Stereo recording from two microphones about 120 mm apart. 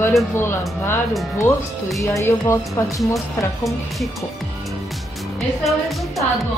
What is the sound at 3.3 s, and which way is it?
Speech, centre (ahead or behind).